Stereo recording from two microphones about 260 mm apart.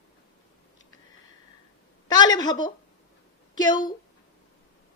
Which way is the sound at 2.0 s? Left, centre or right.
Centre.